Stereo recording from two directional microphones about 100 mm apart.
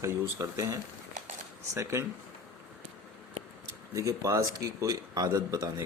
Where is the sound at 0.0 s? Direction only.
30° right (ahead or behind).